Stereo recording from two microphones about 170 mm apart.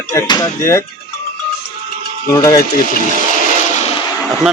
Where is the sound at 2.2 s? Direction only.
20° left (ahead or behind).